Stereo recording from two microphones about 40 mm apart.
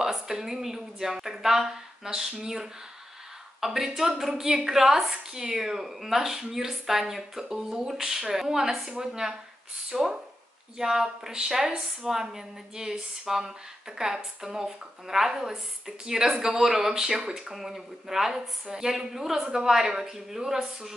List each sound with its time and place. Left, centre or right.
0.0 s a woman's voice: centre